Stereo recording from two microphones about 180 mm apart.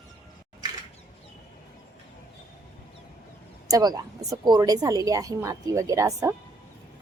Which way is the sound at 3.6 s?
20° right (ahead or behind).